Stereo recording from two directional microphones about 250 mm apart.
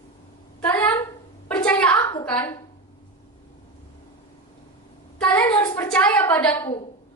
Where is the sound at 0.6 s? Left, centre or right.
Centre.